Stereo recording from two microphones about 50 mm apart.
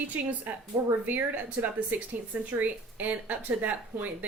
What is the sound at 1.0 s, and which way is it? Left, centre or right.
Speech, right.